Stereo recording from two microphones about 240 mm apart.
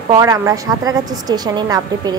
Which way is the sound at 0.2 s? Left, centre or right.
Centre.